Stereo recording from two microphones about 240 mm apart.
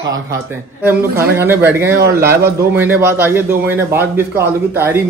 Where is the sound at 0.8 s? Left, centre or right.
Centre.